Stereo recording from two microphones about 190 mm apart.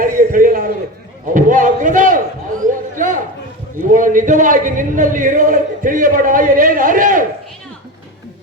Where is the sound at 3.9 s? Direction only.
45° right (ahead or behind).